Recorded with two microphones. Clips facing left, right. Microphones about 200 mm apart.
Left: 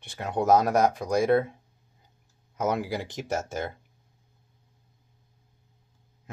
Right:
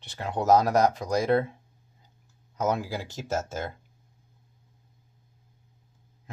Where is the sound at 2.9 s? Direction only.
20° left (ahead or behind).